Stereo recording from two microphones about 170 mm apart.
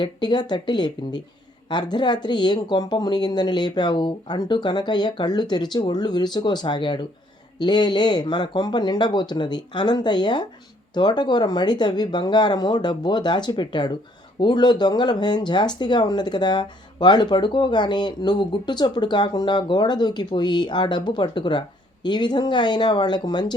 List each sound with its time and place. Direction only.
0.0 s speech: 25° left (ahead or behind)